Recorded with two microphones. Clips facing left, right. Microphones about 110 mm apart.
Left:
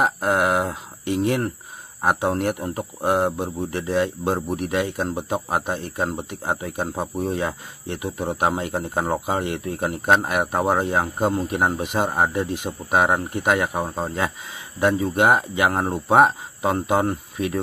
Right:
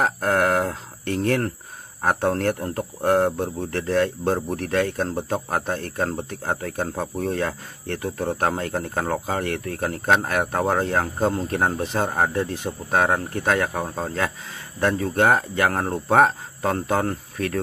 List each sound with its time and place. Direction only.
0.0 s speech: 10° left (ahead or behind)